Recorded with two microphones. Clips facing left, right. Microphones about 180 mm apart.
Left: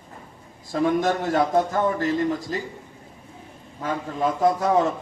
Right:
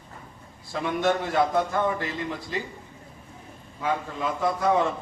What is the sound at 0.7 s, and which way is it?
A man's voice, 40° left (ahead or behind).